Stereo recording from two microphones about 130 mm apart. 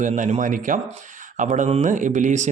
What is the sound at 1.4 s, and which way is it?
A man's voice, 70° right (ahead or behind).